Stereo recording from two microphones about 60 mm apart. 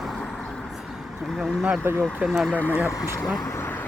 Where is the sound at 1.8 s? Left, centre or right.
Right.